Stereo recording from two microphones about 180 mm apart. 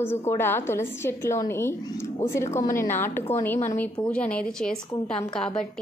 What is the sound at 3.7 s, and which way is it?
A woman's voice, 5° left (ahead or behind).